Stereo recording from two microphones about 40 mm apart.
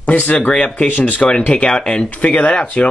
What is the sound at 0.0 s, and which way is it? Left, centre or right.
Speech, left.